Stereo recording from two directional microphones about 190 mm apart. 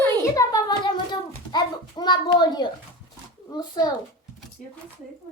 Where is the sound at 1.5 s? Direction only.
20° left (ahead or behind).